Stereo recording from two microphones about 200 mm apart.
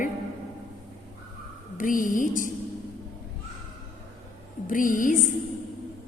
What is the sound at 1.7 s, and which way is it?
Speech, 40° left (ahead or behind).